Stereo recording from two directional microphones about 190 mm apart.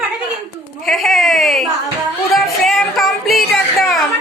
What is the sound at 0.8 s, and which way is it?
Music, centre (ahead or behind).